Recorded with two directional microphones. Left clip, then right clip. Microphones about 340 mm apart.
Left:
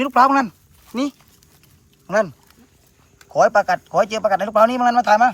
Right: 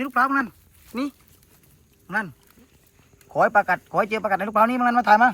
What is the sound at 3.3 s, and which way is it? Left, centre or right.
Speech, centre.